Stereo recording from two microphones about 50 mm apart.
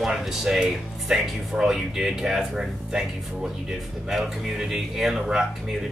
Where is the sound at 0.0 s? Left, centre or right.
Centre.